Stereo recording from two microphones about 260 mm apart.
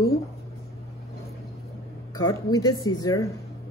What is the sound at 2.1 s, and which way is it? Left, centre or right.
Speech, centre.